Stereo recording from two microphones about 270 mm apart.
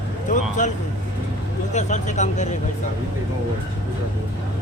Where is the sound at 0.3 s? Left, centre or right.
Left.